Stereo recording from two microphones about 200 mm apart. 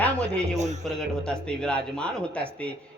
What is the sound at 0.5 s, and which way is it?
Speech, 35° right (ahead or behind).